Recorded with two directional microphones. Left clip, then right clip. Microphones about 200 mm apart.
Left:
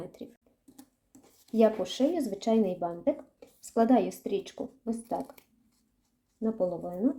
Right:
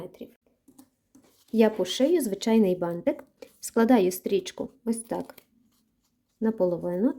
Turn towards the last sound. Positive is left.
turn(degrees=-45)  # may be behind; listen again after turning